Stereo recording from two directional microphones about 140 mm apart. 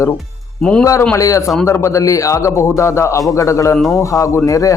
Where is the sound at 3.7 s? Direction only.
Centre (ahead or behind).